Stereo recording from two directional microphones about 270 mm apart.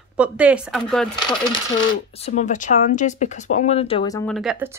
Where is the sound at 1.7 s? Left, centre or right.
Left.